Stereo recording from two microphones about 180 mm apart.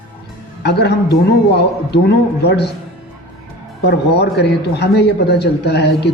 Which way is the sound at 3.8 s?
70° left (ahead or behind).